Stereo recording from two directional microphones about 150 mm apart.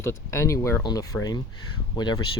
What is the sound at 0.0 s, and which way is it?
Speech, 20° left (ahead or behind).